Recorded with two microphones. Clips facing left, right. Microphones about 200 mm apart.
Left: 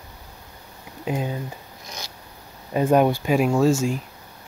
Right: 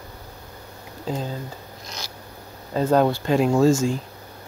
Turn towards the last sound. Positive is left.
turn(degrees=5)  # may be behind; listen again after turning